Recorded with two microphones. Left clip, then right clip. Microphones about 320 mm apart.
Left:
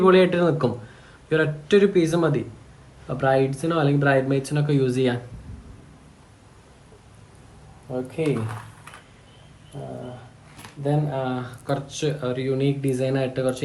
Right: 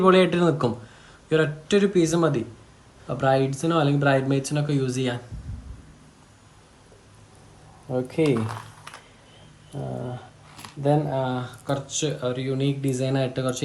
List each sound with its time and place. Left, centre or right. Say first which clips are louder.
0.0 s speech: left 1 dB; centre
7.9 s speech: right 3 dB; right
9.7 s a sound: right 2 dB; right
10.6 s speech: right 3 dB; centre